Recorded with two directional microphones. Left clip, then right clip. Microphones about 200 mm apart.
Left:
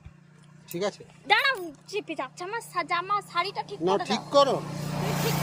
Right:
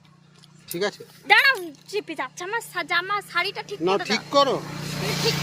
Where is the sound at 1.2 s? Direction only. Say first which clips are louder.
Right 6 dB; 5° right (ahead or behind).